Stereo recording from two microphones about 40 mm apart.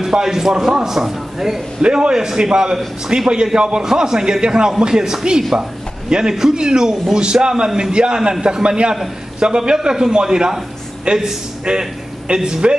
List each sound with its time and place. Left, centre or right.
0.0 s a man's voice: centre
1.8 s a man's voice: right